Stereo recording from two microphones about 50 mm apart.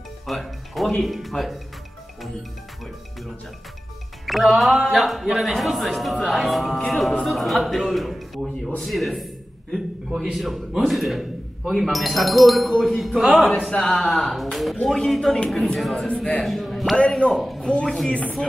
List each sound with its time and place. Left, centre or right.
0.3 s music: centre
1.0 s speech: centre
4.3 s speech: centre
8.8 s a sound: centre
10.3 s speech: centre
13.7 s a man's voice: centre
17.2 s a man's voice: left